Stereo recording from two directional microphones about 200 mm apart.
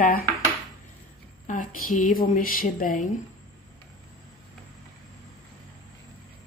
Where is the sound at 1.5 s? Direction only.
40° left (ahead or behind).